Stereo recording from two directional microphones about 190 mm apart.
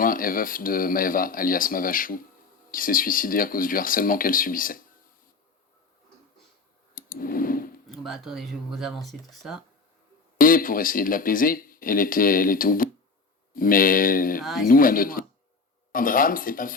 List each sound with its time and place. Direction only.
0.0 s speech: 45° left (ahead or behind)
6.9 s a sound: 50° left (ahead or behind)
7.9 s speech: centre (ahead or behind)
10.3 s speech: 45° left (ahead or behind)
14.4 s speech: centre (ahead or behind)
14.7 s speech: 45° left (ahead or behind)